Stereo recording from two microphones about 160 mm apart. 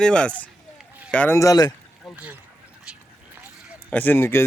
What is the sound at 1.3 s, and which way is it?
Speech, 20° left (ahead or behind).